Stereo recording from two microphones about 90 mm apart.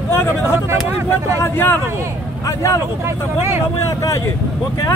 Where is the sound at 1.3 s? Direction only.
25° left (ahead or behind).